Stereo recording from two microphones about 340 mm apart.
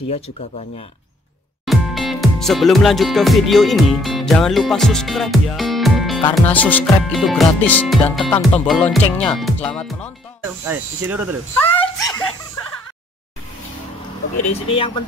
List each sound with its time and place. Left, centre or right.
0.1 s speech: centre
1.7 s music: centre
6.3 s speech: centre
10.4 s speech: centre
11.5 s speech: centre
14.3 s speech: centre